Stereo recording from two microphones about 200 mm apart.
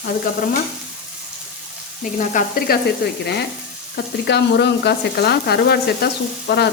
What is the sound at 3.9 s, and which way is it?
Frying, 55° left (ahead or behind).